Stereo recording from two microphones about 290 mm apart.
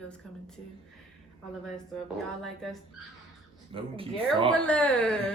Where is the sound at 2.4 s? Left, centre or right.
Centre.